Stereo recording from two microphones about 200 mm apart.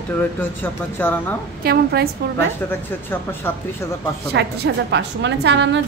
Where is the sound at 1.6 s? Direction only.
50° right (ahead or behind).